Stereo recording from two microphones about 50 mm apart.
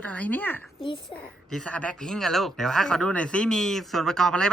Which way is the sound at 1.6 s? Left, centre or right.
Left.